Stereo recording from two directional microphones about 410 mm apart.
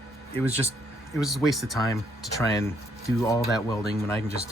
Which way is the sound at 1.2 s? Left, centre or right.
Centre.